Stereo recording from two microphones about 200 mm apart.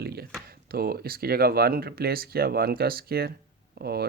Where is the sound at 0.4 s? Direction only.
50° right (ahead or behind).